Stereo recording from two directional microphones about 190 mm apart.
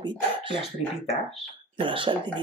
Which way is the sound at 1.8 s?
25° right (ahead or behind).